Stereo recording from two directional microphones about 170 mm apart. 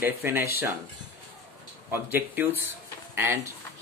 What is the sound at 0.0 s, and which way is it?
Speech, 15° right (ahead or behind).